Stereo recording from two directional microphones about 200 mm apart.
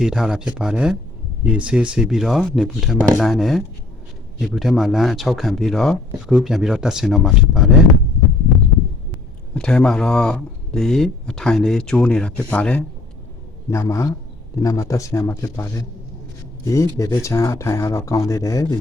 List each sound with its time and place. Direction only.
0.0 s speech: 5° right (ahead or behind)
9.6 s speech: 5° left (ahead or behind)